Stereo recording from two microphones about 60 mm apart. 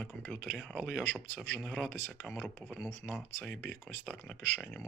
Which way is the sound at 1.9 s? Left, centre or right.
Left.